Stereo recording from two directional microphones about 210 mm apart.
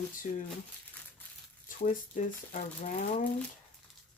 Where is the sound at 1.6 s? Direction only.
40° left (ahead or behind).